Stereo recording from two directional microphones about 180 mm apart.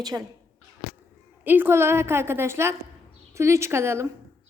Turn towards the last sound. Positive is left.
turn(degrees=-15)  # may be behind; listen again after turning